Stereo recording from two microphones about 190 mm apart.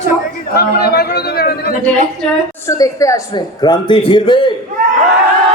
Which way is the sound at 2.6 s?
15° left (ahead or behind).